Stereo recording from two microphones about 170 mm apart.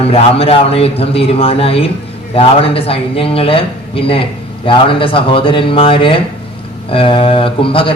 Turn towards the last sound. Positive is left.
turn(degrees=30)  # may be behind; listen again after turning